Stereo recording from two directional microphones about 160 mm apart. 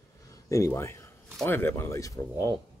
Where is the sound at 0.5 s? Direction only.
20° left (ahead or behind).